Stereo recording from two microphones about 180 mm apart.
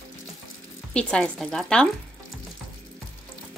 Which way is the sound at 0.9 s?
5° left (ahead or behind).